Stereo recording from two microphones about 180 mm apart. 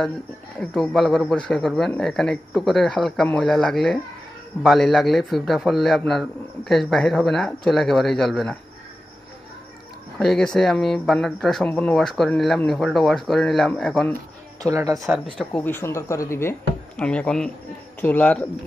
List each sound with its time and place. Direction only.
0.6 s speech: centre (ahead or behind)
10.1 s speech: centre (ahead or behind)
14.6 s speech: 20° right (ahead or behind)
15.0 s speech: 5° right (ahead or behind)
15.3 s speech: 10° left (ahead or behind)